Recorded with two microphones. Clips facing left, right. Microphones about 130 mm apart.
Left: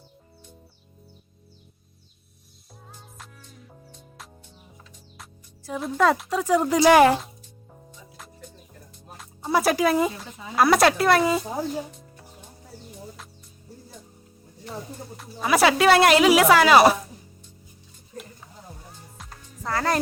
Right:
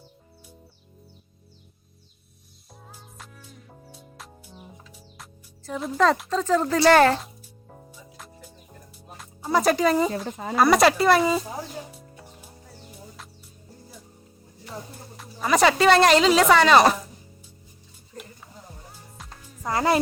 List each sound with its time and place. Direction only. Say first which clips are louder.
2.9 s music: even; 5° right (ahead or behind)
5.8 s speech: even; 5° left (ahead or behind)
7.9 s music: left 2 dB; 5° right (ahead or behind)
10.1 s speech: right 7 dB; 55° right (ahead or behind)
10.5 s speech: even; centre (ahead or behind)
11.9 s music: right 1 dB; 5° right (ahead or behind)
14.7 s speech: left 3 dB; centre (ahead or behind)
19.6 s speech: right 3 dB; 15° right (ahead or behind)